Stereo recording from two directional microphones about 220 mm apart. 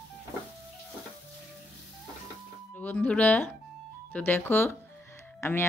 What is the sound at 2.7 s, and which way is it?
Speech, 5° left (ahead or behind).